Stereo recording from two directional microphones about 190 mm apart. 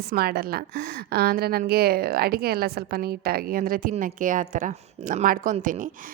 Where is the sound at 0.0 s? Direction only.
55° right (ahead or behind).